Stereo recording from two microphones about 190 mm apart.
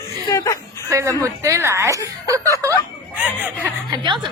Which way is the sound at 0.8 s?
15° right (ahead or behind).